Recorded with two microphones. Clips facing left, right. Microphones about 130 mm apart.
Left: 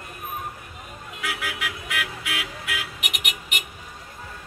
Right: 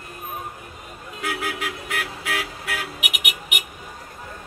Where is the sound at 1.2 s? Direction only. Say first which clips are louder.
Right 4 dB; 45° right (ahead or behind).